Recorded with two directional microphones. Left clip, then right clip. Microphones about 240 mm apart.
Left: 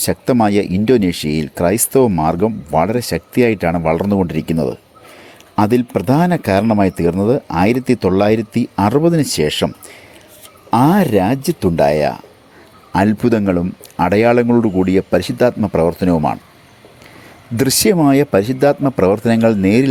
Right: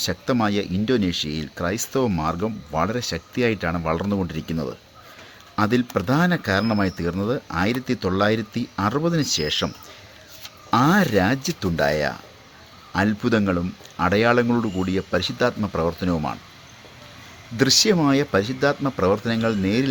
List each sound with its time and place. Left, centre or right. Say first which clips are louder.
0.0 s speech: left 8 dB; left
5.5 s speech: left 7 dB; left
17.6 s speech: left 4 dB; left